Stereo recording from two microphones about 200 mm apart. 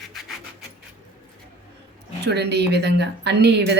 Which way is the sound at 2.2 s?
55° right (ahead or behind).